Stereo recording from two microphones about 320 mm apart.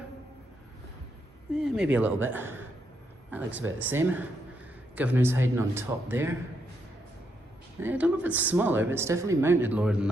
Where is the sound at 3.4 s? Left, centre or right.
Right.